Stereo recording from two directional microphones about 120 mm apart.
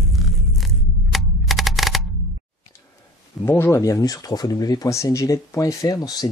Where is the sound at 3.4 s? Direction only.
20° left (ahead or behind).